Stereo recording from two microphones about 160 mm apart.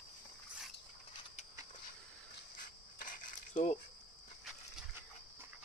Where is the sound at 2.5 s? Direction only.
55° left (ahead or behind).